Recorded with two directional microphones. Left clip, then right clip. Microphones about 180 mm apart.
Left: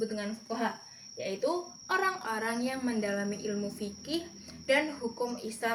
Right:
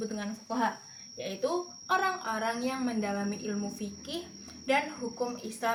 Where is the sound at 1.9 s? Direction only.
15° left (ahead or behind).